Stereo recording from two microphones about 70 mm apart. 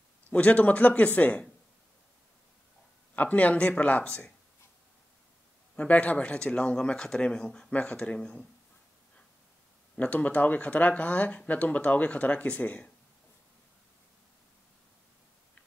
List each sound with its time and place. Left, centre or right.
0.3 s speech: centre
3.2 s speech: left
5.8 s speech: centre
9.9 s speech: left